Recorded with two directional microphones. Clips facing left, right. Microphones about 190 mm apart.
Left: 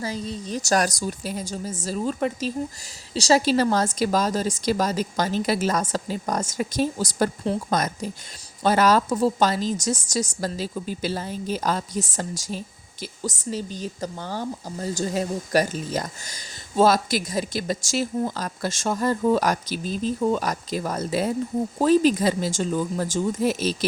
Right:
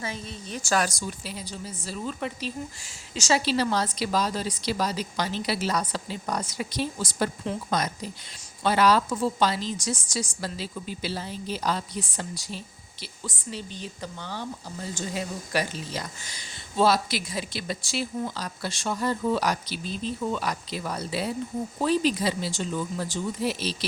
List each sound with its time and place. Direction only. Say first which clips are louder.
0.0 s a woman's voice: left 6 dB; 35° left (ahead or behind)